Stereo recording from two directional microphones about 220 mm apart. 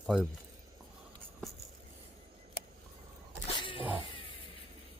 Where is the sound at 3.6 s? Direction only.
25° left (ahead or behind).